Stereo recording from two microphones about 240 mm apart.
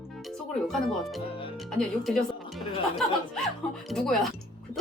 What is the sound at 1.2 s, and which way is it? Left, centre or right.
Music, left.